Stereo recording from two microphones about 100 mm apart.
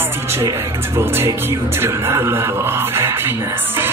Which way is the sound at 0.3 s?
30° right (ahead or behind).